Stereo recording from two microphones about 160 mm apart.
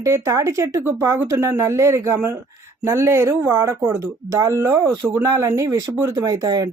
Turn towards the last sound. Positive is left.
turn(degrees=-25)  # may be behind; listen again after turning